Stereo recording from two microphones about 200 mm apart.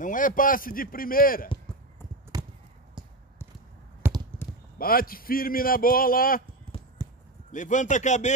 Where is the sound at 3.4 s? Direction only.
10° left (ahead or behind).